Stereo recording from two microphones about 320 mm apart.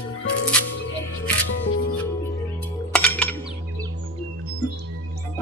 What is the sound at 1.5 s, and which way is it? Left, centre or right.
Music, left.